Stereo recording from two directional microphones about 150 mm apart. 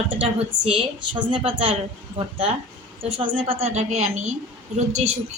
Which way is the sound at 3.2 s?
45° right (ahead or behind).